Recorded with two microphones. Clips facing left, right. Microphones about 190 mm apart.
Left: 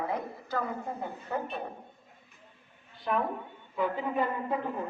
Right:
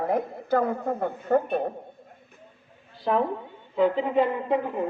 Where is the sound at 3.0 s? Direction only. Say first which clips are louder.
Right 6 dB; 30° right (ahead or behind).